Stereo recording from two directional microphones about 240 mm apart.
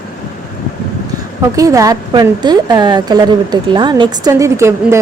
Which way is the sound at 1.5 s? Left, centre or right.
Centre.